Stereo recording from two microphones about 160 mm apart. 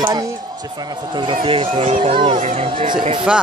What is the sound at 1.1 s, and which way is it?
Speech, 30° right (ahead or behind).